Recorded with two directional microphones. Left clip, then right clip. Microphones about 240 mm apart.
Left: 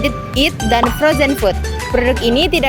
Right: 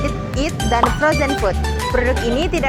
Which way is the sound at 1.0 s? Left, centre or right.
Left.